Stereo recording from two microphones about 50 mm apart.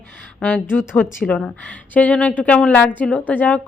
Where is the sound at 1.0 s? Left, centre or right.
Left.